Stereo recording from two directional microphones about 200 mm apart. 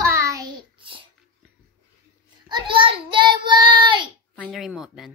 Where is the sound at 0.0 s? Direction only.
15° right (ahead or behind).